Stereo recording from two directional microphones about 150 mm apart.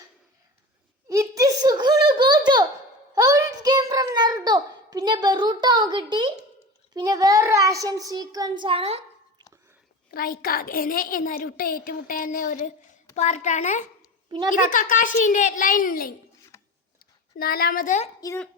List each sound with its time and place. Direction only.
1.0 s a sound: 20° right (ahead or behind)
6.9 s a child's voice: 25° right (ahead or behind)
10.1 s a woman's voice: 80° left; by 13.8 s 55° left (ahead or behind)
14.3 s a child's voice: 35° right (ahead or behind)
14.5 s a child's voice: 65° left (ahead or behind)
16.5 s a sound: 20° left (ahead or behind)
17.0 s a woman's voice: 85° left; by 18.1 s 60° left (ahead or behind)